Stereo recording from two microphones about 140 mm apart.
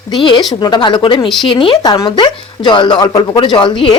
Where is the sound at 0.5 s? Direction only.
30° left (ahead or behind).